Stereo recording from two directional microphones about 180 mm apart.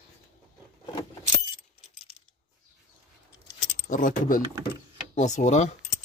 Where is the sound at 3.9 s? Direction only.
45° left (ahead or behind).